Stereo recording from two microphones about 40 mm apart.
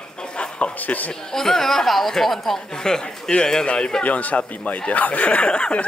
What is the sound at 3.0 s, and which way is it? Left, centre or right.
Speech, left.